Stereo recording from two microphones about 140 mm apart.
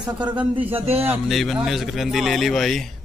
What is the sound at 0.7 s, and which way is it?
Speech, 45° right (ahead or behind).